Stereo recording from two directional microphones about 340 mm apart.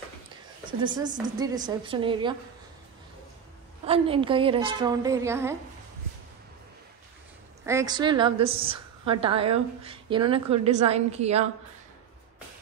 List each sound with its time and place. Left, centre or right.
0.7 s a woman's voice: centre
3.8 s a woman's voice: centre
7.6 s a woman's voice: centre